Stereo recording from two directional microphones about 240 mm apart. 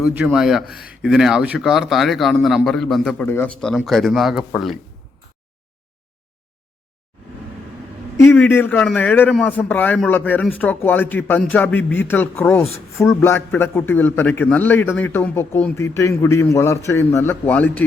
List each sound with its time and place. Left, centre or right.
0.0 s a man's voice: centre
8.2 s a man's voice: centre